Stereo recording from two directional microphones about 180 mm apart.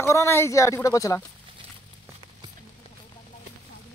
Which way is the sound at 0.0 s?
15° left (ahead or behind).